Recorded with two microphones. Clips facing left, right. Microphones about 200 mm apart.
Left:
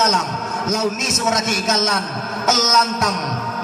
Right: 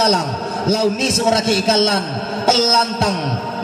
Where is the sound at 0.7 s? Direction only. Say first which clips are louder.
Right 5 dB; 30° right (ahead or behind).